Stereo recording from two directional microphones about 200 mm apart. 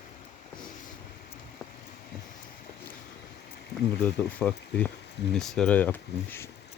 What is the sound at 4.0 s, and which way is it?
Speech, 5° left (ahead or behind).